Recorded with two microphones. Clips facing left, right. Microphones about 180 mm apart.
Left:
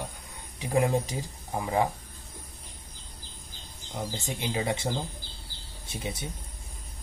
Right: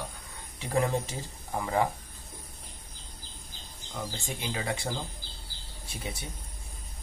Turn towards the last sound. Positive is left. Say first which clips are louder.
# left 3 dB
turn(degrees=20)  # may be behind; listen again after turning